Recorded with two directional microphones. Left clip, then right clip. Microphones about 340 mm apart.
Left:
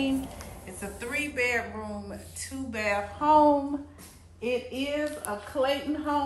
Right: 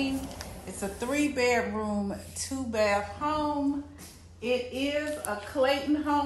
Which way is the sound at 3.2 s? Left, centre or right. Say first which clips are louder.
Left 9 dB; centre.